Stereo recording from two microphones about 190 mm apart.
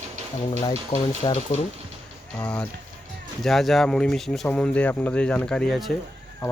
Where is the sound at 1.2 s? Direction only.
35° left (ahead or behind).